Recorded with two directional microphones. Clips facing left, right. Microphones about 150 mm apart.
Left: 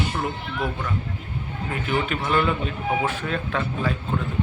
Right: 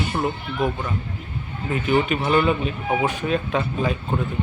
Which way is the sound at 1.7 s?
20° right (ahead or behind).